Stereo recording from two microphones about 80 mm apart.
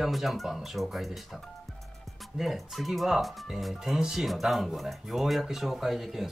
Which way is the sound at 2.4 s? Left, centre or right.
Centre.